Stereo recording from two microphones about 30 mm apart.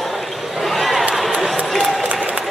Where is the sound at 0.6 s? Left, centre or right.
Centre.